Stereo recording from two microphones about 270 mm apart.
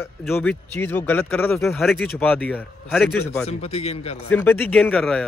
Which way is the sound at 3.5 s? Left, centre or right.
Left.